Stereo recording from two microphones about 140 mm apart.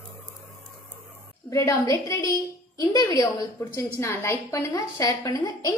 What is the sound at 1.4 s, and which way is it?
A woman's voice, 25° left (ahead or behind).